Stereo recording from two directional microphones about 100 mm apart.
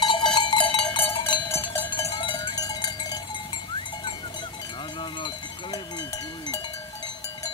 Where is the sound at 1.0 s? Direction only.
20° left (ahead or behind).